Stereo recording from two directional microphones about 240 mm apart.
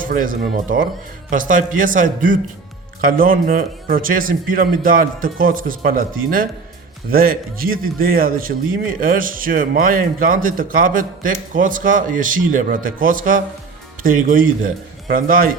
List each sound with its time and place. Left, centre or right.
0.0 s a man's voice: right